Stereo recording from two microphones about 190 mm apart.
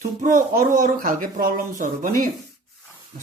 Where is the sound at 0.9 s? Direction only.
45° right (ahead or behind).